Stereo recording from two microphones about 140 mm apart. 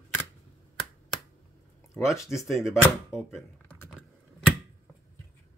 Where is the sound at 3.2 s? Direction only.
5° left (ahead or behind).